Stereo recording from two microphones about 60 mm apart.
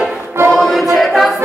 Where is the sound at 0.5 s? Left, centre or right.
Centre.